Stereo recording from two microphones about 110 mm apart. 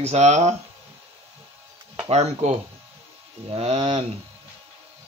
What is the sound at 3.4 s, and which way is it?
Speech, 70° right (ahead or behind).